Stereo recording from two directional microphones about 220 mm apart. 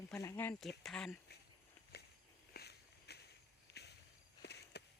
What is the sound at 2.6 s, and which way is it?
Walk, 50° left (ahead or behind).